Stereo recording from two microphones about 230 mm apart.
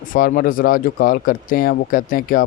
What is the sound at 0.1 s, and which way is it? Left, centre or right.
Speech, left.